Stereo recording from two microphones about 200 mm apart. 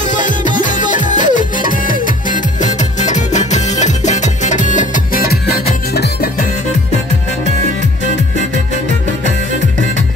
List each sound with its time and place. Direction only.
0.1 s music: 40° left (ahead or behind)